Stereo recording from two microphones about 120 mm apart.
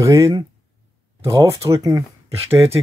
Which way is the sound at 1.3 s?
25° right (ahead or behind).